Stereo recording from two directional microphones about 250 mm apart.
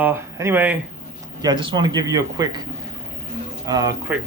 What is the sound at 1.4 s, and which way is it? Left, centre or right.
Speech, centre.